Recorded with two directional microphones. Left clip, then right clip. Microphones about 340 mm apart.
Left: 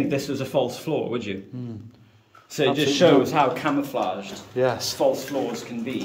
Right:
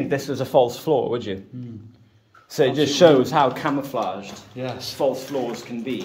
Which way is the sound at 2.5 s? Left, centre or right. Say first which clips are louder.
Right 2 dB; centre.